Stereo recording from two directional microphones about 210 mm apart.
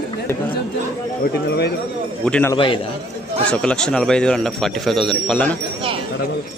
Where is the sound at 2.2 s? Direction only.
10° left (ahead or behind).